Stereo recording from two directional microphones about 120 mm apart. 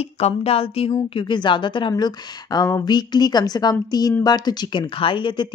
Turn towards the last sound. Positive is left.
turn(degrees=40)  # may be behind; listen again after turning